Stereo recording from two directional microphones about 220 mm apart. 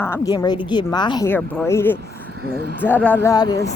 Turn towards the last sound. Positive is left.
turn(degrees=15)  # may be behind; listen again after turning